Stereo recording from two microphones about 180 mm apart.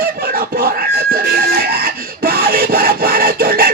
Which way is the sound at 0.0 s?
55° right (ahead or behind).